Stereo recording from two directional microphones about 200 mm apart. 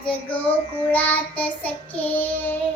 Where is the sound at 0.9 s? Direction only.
10° left (ahead or behind).